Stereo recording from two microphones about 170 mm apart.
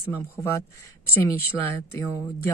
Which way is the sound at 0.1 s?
15° left (ahead or behind).